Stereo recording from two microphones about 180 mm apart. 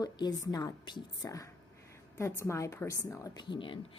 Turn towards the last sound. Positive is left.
turn(degrees=25)  # may be behind; listen again after turning